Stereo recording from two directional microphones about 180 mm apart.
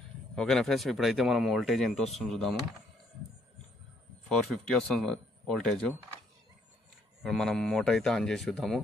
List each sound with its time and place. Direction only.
0.4 s speech: centre (ahead or behind)
4.3 s speech: 5° left (ahead or behind)
7.2 s speech: 5° left (ahead or behind)